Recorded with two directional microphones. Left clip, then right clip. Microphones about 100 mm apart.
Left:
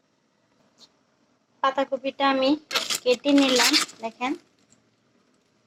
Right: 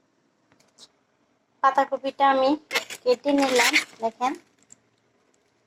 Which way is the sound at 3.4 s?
30° right (ahead or behind).